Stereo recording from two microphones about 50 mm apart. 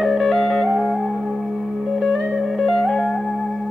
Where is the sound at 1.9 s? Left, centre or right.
Centre.